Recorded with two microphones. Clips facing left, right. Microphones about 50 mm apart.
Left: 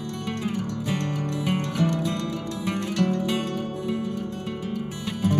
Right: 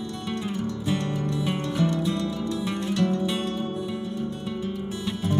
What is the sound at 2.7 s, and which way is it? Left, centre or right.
Music, left.